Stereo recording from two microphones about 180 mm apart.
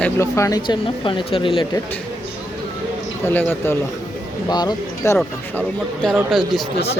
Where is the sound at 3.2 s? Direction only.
10° left (ahead or behind).